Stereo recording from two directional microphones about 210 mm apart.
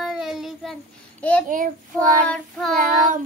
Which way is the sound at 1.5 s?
40° right (ahead or behind).